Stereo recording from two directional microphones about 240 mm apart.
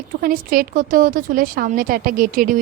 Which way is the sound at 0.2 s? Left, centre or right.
Right.